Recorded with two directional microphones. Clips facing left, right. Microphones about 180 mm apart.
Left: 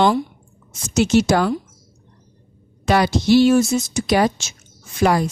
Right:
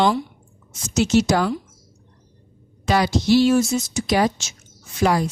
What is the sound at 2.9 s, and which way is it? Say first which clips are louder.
Speech: left 2 dB; 60° left (ahead or behind).